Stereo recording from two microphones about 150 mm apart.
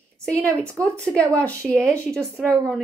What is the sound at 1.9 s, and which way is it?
Speech, 20° right (ahead or behind).